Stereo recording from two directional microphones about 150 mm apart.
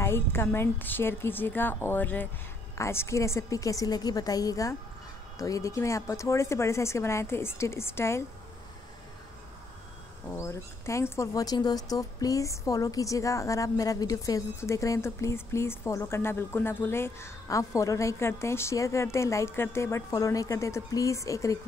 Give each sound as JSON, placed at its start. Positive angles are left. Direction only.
{"t": 0.0, "sound": "a woman's voice", "side_deg": 15}
{"t": 10.3, "sound": "speech", "side_deg": 20}